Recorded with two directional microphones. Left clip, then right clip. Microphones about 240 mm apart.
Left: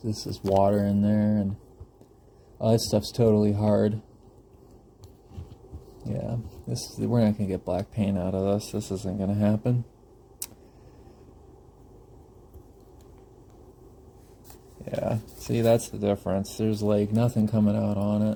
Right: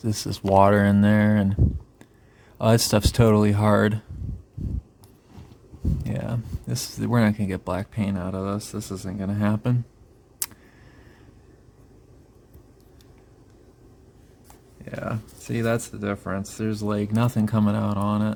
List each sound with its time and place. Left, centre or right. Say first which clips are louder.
0.3 s speech: right 5 dB; right
0.6 s speech: right 5 dB; right
2.6 s speech: right 4 dB; right
6.1 s speech: left 2 dB; right
7.9 s speech: even; right
8.2 s speech: left 3 dB; centre
14.8 s speech: left 3 dB; centre
16.9 s speech: even; centre